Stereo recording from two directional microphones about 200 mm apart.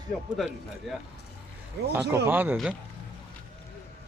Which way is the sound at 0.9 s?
Centre (ahead or behind).